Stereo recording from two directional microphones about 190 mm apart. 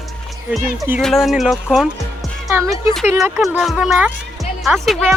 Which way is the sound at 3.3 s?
Centre (ahead or behind).